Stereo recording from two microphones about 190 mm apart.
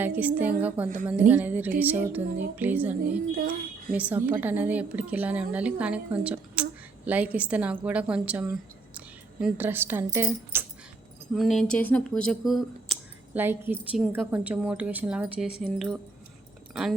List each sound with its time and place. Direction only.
0.0 s a woman's voice: 10° right (ahead or behind)
3.3 s speech: 50° right (ahead or behind)
3.9 s a woman's voice: 10° right (ahead or behind)
11.3 s speech: centre (ahead or behind)
13.4 s a woman's voice: 10° right (ahead or behind)